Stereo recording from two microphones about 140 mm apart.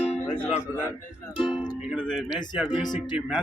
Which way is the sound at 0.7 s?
20° right (ahead or behind).